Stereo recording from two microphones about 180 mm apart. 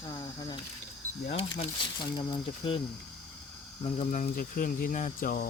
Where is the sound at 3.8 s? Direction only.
40° left (ahead or behind).